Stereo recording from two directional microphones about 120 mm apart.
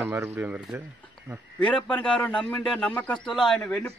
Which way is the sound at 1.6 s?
10° left (ahead or behind).